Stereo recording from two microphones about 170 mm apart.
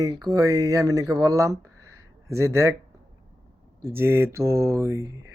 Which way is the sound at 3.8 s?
15° right (ahead or behind).